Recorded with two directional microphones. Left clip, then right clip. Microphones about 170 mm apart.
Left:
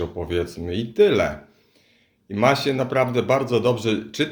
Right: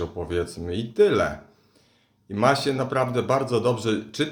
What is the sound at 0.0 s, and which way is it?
Speech, 15° left (ahead or behind).